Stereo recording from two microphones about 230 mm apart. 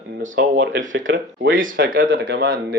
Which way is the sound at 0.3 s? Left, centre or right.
Right.